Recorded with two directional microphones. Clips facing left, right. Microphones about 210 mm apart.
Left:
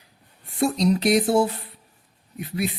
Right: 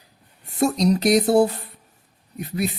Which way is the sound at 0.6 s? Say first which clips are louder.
Right 2 dB; 40° right (ahead or behind).